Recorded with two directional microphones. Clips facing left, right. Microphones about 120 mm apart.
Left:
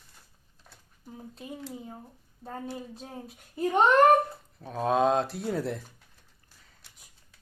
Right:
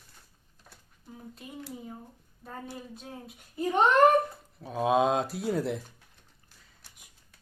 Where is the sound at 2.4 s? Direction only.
30° left (ahead or behind).